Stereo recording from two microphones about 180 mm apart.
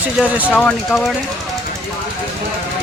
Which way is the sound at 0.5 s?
5° left (ahead or behind).